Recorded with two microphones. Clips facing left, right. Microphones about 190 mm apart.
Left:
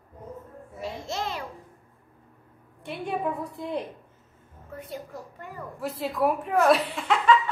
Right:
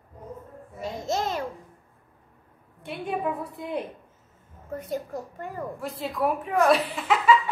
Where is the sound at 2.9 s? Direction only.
Centre (ahead or behind).